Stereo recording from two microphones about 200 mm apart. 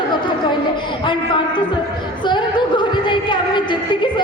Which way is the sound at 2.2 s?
25° left (ahead or behind).